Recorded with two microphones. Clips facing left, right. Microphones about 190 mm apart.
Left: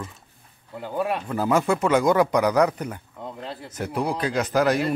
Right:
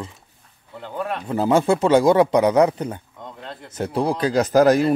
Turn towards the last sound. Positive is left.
turn(degrees=-40)  # may be behind; listen again after turning